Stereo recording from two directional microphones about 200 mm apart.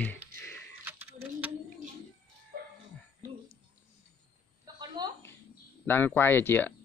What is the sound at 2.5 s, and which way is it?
Dog, 50° right (ahead or behind).